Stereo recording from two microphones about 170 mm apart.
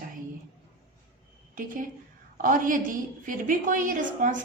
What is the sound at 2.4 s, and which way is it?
A woman's voice, 50° right (ahead or behind).